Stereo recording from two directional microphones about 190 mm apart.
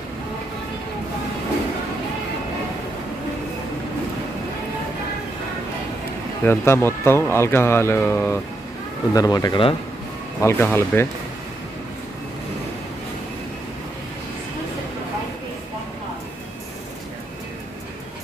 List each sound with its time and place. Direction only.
6.4 s speech: 10° left (ahead or behind)
10.4 s speech: 10° left (ahead or behind)